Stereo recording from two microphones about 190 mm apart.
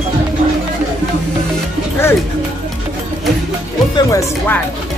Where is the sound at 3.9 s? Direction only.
15° left (ahead or behind).